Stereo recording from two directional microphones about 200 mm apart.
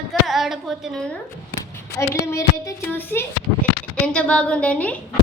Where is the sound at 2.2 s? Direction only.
15° left (ahead or behind).